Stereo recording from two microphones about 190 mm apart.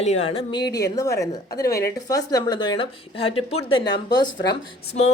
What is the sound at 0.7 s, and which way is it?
A woman's voice, 20° left (ahead or behind).